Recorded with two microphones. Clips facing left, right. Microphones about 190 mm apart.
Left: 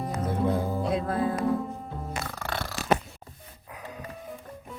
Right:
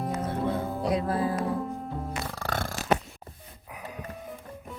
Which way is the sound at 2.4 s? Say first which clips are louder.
Right 2 dB; 45° right (ahead or behind).